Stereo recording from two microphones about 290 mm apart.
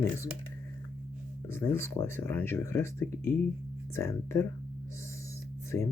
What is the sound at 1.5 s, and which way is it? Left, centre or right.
Speech, centre.